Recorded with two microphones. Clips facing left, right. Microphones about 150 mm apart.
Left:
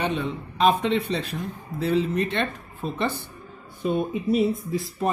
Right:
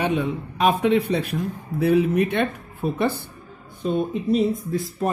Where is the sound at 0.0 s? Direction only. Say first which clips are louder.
Right 4 dB; 10° right (ahead or behind).